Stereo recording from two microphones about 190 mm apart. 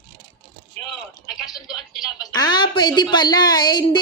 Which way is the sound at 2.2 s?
20° left (ahead or behind).